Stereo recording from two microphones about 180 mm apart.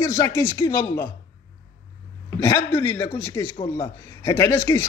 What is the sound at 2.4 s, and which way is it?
A man's voice, 15° left (ahead or behind).